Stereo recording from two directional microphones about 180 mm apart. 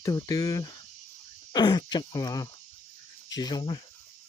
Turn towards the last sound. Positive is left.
turn(degrees=25)  # may be behind; listen again after turning